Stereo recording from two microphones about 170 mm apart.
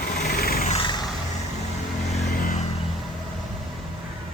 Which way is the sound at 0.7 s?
30° left (ahead or behind).